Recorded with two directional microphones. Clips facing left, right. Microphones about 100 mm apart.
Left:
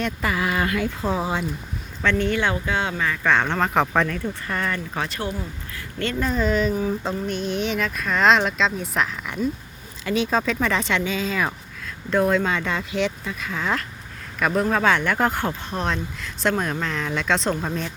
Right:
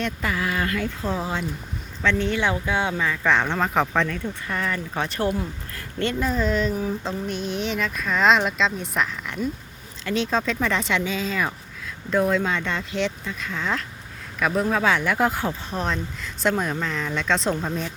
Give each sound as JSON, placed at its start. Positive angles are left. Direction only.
{"t": 0.0, "sound": "speech", "side_deg": 5}
{"t": 0.4, "sound": "speech", "side_deg": 15}
{"t": 2.0, "sound": "speech", "side_deg": 0}
{"t": 2.5, "sound": "speech", "side_deg": -15}
{"t": 3.2, "sound": "speech", "side_deg": 0}
{"t": 6.1, "sound": "speech", "side_deg": 0}